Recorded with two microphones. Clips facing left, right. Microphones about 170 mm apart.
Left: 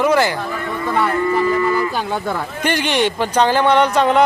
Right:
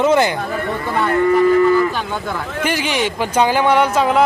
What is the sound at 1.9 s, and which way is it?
Speech, 30° left (ahead or behind).